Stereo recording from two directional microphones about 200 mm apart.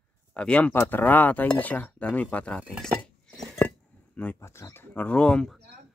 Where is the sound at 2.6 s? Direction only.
Centre (ahead or behind).